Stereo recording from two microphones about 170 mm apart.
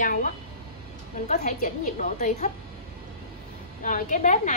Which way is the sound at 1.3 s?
50° left (ahead or behind).